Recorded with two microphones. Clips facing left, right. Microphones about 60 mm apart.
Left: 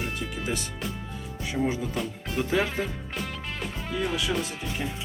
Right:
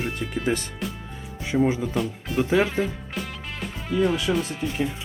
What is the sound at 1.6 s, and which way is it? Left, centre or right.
Speech, centre.